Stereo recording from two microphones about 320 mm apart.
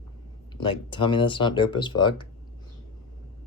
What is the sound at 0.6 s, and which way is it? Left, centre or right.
Speech, centre.